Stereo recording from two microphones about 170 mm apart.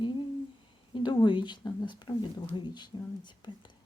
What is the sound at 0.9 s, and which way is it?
A woman's voice, 25° left (ahead or behind).